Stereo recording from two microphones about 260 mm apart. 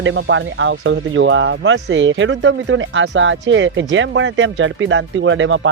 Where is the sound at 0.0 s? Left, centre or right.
Right.